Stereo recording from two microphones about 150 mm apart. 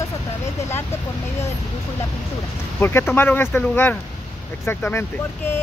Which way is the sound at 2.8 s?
15° left (ahead or behind).